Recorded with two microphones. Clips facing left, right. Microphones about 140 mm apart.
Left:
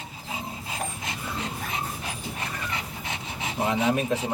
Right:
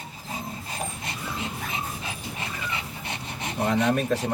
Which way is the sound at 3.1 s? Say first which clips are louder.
Even; 5° left (ahead or behind).